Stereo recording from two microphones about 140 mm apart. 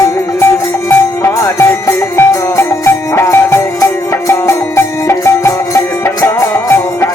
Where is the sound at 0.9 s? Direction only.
15° left (ahead or behind).